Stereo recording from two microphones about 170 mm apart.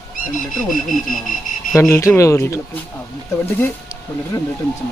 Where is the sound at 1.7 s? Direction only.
15° left (ahead or behind).